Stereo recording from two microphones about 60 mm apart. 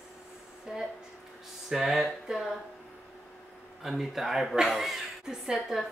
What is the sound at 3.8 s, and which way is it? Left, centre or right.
Speech, centre.